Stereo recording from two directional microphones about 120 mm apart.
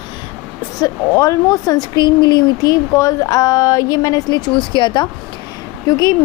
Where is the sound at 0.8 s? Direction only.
30° left (ahead or behind).